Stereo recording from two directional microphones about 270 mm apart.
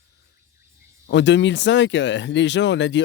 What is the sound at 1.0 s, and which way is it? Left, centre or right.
Speech, left.